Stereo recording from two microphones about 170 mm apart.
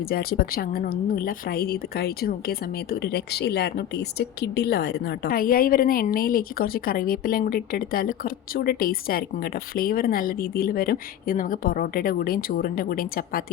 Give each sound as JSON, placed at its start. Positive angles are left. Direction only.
{"t": 0.0, "sound": "a woman's voice", "side_deg": 60}